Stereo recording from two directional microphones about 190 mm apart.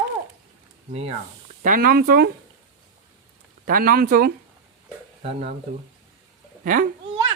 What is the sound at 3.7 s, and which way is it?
Speech, 50° right (ahead or behind).